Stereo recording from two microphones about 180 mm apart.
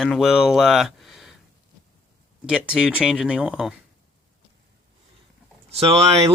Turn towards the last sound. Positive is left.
turn(degrees=-35)  # may be behind; listen again after turning